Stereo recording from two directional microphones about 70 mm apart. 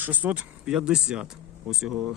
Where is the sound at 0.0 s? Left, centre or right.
Right.